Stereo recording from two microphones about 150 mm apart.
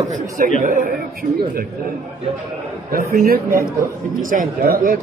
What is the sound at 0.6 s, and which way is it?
Speech, 65° right (ahead or behind).